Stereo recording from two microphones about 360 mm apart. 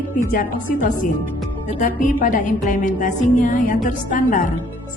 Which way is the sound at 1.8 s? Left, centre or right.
Left.